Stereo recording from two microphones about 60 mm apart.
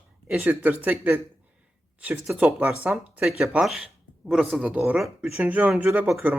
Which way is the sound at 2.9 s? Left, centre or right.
Right.